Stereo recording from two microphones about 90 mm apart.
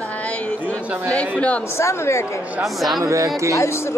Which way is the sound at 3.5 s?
30° left (ahead or behind).